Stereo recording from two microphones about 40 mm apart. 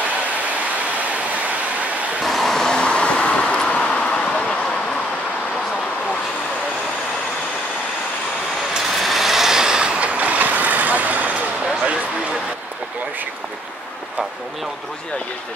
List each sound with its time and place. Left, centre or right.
2.2 s vehicle: centre
2.7 s vehicle: left
9.0 s vehicle: centre
9.9 s vehicle: right
11.6 s a sound: right